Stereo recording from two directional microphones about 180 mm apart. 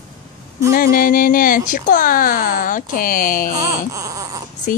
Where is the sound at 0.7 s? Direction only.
50° left (ahead or behind).